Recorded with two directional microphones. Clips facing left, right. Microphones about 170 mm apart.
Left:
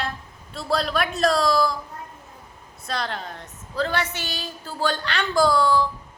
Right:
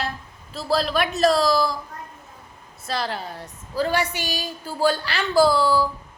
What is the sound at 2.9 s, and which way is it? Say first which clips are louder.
A woman's voice: right 2 dB; 5° right (ahead or behind).